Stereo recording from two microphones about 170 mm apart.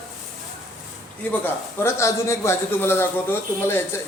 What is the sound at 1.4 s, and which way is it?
Speech, 15° left (ahead or behind).